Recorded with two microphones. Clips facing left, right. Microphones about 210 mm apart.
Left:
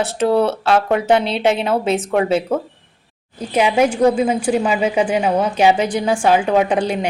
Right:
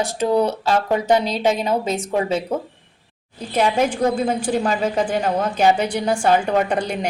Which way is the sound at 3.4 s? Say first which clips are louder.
Left 3 dB; 10° left (ahead or behind).